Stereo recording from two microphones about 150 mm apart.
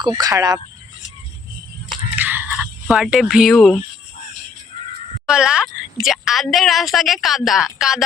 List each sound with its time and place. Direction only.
0.0 s speech: 25° right (ahead or behind)
2.1 s a sound: 15° right (ahead or behind)
2.9 s speech: centre (ahead or behind)
5.3 s speech: 5° right (ahead or behind)